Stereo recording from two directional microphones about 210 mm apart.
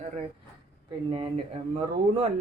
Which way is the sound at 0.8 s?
25° right (ahead or behind).